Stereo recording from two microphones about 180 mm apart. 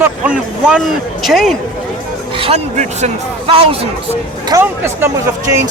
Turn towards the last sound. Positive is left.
turn(degrees=-15)  # may be behind; listen again after turning